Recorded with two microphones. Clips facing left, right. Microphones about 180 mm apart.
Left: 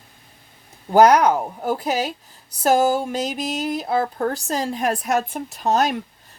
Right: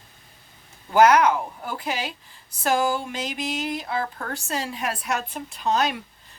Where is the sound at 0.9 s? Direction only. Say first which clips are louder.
Left 3 dB; 35° left (ahead or behind).